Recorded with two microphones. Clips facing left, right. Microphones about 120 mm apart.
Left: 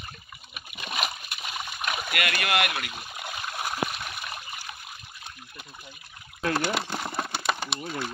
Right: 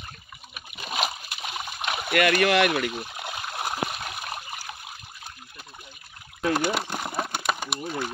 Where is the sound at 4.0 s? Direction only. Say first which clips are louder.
Right 3 dB; 40° right (ahead or behind).